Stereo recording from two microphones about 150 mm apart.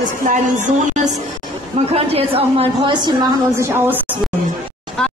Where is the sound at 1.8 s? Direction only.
45° right (ahead or behind).